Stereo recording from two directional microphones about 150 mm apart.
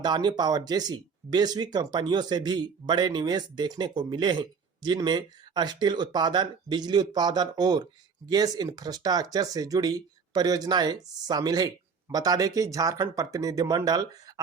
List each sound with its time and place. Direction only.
0.0 s speech: 30° right (ahead or behind)